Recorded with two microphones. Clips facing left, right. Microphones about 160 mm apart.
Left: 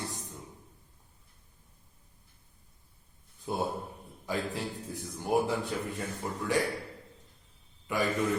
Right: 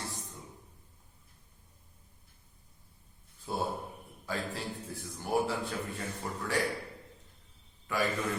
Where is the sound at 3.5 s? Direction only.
15° left (ahead or behind).